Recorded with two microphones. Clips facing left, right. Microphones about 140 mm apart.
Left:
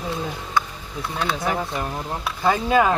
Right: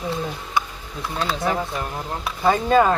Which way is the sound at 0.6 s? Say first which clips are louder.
Left 1 dB; 15° right (ahead or behind).